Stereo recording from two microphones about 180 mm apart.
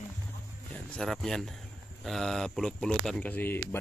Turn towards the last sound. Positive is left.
turn(degrees=10)  # may be behind; listen again after turning